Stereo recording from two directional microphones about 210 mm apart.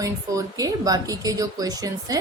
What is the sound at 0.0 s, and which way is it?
A woman's voice, 15° right (ahead or behind).